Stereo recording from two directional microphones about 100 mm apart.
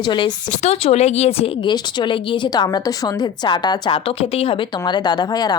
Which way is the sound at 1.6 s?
50° left (ahead or behind).